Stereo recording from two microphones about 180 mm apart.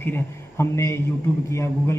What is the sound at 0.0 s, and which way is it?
A man's voice, 15° left (ahead or behind).